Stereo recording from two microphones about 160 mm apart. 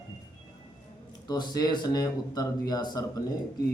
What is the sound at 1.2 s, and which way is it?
Speech, 25° left (ahead or behind).